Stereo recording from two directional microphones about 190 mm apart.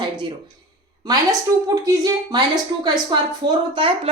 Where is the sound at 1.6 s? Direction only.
20° right (ahead or behind).